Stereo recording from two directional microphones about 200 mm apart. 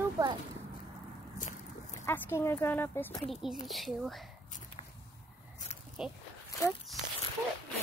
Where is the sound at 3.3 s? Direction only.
Centre (ahead or behind).